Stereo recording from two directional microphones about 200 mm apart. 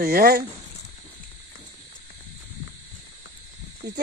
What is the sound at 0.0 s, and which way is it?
Speech, 50° right (ahead or behind).